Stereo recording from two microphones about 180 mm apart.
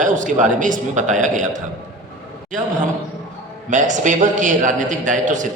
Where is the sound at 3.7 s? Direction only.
45° right (ahead or behind).